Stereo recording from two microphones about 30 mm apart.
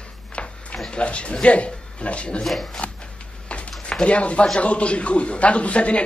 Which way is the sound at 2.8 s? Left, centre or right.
Left.